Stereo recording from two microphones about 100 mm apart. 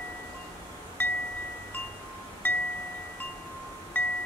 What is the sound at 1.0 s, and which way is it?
Chime, 15° left (ahead or behind).